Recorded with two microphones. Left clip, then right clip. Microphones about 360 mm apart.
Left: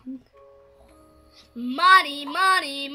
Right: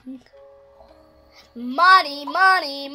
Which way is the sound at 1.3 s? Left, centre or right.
Centre.